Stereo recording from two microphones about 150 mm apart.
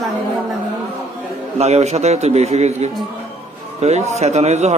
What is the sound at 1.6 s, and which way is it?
A man's voice, 45° right (ahead or behind).